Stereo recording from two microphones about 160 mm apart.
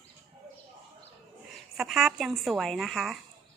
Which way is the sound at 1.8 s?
Centre (ahead or behind).